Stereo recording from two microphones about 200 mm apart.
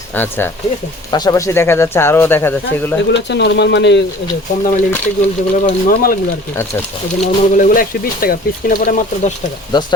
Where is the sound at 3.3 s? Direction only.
60° left (ahead or behind).